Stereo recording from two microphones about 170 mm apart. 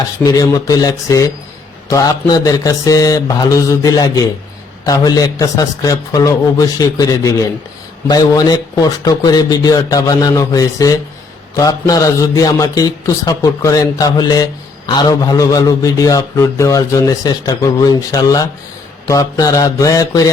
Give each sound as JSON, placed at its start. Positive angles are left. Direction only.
{"t": 0.3, "sound": "a man's voice", "side_deg": 20}